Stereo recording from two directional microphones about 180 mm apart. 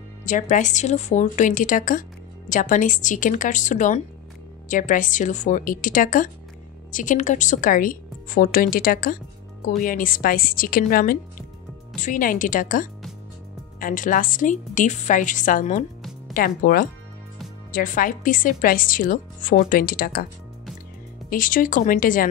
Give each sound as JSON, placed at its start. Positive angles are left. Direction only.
{"t": 0.2, "sound": "speech", "side_deg": 45}
{"t": 16.0, "sound": "music", "side_deg": 0}
{"t": 16.3, "sound": "speech", "side_deg": 55}
{"t": 21.3, "sound": "speech", "side_deg": 50}